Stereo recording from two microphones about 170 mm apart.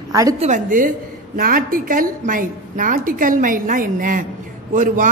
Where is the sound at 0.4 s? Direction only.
50° right (ahead or behind).